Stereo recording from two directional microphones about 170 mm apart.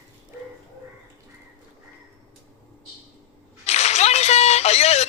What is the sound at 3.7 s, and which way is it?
Whip, 40° left (ahead or behind).